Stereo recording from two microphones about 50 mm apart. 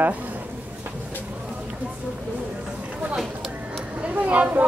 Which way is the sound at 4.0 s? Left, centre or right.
Right.